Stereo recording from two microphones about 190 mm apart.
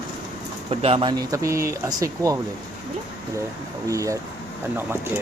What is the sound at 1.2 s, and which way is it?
Speech, 15° right (ahead or behind).